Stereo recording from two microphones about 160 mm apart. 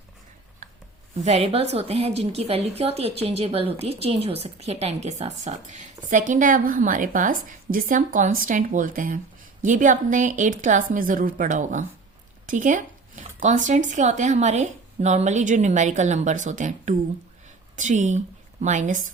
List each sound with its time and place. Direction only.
1.2 s a woman's voice: 40° right (ahead or behind)